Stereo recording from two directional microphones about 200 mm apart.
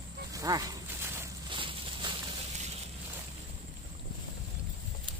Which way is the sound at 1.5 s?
25° right (ahead or behind).